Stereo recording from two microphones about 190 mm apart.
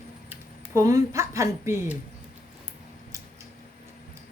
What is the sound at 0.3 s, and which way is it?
Speech, 15° right (ahead or behind).